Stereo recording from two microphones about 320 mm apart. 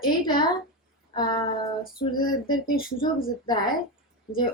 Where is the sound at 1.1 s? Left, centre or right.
Centre.